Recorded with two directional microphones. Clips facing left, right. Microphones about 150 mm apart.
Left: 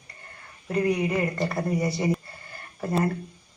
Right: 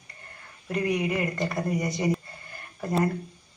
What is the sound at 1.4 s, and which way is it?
Speech, 30° left (ahead or behind).